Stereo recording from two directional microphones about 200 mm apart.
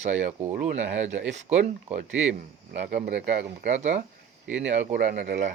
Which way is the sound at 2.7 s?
45° right (ahead or behind).